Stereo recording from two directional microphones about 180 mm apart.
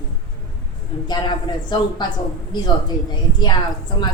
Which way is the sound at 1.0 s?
25° left (ahead or behind).